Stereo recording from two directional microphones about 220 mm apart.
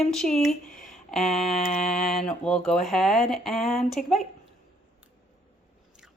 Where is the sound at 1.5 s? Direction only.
30° left (ahead or behind).